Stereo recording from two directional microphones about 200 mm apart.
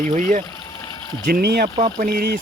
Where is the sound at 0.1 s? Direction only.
40° right (ahead or behind).